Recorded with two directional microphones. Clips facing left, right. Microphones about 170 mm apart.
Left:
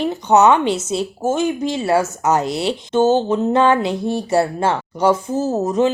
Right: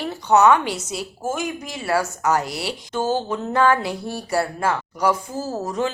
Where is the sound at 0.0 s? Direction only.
20° left (ahead or behind).